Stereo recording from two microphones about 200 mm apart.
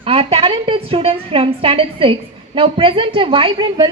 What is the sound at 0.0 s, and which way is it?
A woman's voice, 30° right (ahead or behind).